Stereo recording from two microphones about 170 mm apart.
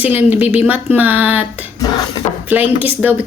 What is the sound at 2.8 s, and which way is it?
Speech, 10° right (ahead or behind).